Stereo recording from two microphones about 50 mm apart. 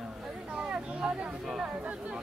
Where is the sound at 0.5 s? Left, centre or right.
Right.